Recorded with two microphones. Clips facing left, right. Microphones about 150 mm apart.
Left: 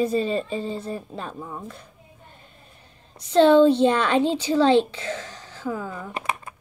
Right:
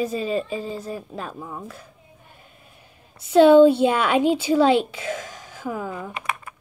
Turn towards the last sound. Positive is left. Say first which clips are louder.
# left 1 dB
turn(degrees=35)  # may be behind; listen again after turning